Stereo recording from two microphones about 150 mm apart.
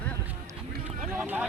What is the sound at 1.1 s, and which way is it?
Vehicle, 15° right (ahead or behind).